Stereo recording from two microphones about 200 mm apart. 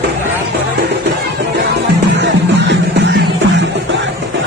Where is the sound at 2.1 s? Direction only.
60° right (ahead or behind).